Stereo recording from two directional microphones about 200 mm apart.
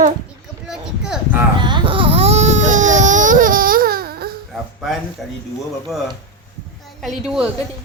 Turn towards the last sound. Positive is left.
turn(degrees=-5)  # may be behind; listen again after turning